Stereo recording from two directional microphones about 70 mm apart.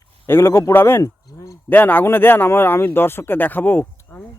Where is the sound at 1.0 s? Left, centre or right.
Left.